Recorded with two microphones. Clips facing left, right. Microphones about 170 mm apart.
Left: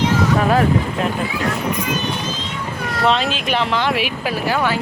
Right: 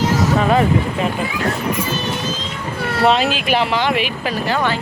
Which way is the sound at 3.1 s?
5° right (ahead or behind).